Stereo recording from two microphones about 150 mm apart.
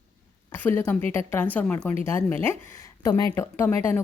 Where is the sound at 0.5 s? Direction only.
15° left (ahead or behind).